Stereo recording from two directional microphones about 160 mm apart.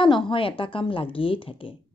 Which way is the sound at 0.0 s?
30° left (ahead or behind).